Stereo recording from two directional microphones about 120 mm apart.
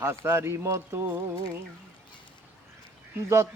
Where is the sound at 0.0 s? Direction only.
20° right (ahead or behind).